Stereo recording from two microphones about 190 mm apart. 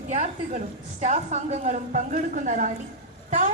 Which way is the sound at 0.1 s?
35° right (ahead or behind).